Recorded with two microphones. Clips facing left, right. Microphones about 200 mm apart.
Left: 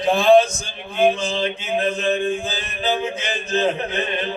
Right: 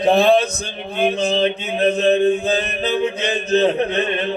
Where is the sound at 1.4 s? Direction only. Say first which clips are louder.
Right 4 dB; 40° right (ahead or behind).